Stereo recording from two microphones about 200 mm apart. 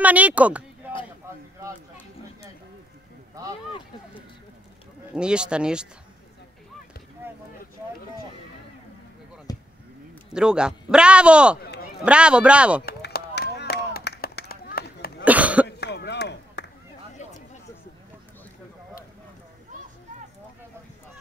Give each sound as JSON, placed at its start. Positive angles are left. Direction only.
{"t": 0.0, "sound": "speech", "side_deg": -5}
{"t": 3.4, "sound": "a sound", "side_deg": -15}
{"t": 5.1, "sound": "a man's voice", "side_deg": -5}
{"t": 9.5, "sound": "a sound", "side_deg": 20}
{"t": 10.3, "sound": "a man's voice", "side_deg": -5}
{"t": 11.6, "sound": "run", "side_deg": 50}
{"t": 12.0, "sound": "a man's voice", "side_deg": -5}
{"t": 12.8, "sound": "a sound", "side_deg": 55}
{"t": 15.2, "sound": "cough", "side_deg": -5}
{"t": 15.8, "sound": "chop", "side_deg": 55}